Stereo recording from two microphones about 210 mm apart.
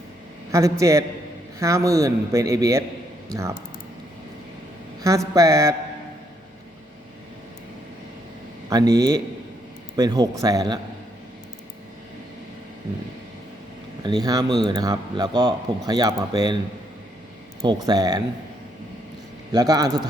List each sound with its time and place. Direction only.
0.5 s a man's voice: 15° right (ahead or behind)
5.0 s a man's voice: 15° right (ahead or behind)
8.7 s a man's voice: 20° right (ahead or behind)
14.0 s a man's voice: 20° right (ahead or behind)
17.6 s a man's voice: 20° right (ahead or behind)
19.5 s a man's voice: 20° right (ahead or behind)